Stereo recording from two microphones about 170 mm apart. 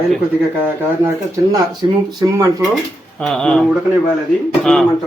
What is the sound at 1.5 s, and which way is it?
Speech, 25° right (ahead or behind).